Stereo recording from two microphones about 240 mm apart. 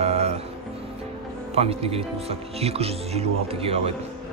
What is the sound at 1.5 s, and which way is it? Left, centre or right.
Speech, right.